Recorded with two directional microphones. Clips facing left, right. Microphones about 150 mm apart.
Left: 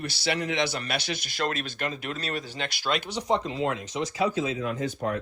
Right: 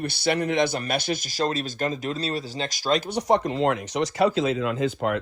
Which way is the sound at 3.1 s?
65° right (ahead or behind).